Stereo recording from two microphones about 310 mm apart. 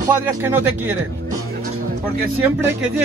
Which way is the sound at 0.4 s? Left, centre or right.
Centre.